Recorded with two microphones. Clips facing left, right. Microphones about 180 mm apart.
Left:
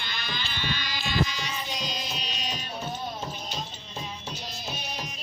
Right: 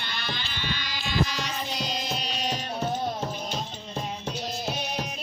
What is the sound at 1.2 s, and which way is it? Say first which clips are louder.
Music: right 2 dB; 60° right (ahead or behind).